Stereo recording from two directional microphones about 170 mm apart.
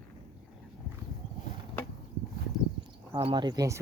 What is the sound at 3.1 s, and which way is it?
Speech, 30° right (ahead or behind).